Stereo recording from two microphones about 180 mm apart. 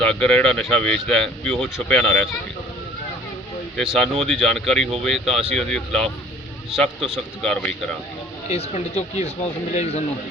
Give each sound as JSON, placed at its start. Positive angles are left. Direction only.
{"t": 0.0, "sound": "speech", "side_deg": 5}
{"t": 3.8, "sound": "speech", "side_deg": 0}
{"t": 8.4, "sound": "speech", "side_deg": 35}